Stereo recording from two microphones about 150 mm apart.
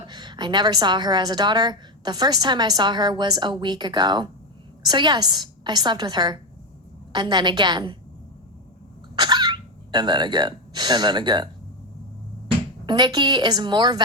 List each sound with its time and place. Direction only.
0.0 s a woman's voice: 30° right (ahead or behind)
9.1 s throat clearing: 30° right (ahead or behind)
12.8 s a woman's voice: 30° right (ahead or behind)